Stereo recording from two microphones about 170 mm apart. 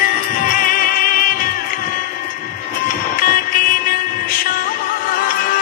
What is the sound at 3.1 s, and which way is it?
Vehicle, 55° left (ahead or behind).